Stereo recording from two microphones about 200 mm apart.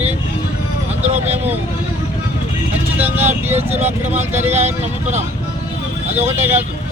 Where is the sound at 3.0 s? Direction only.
10° right (ahead or behind).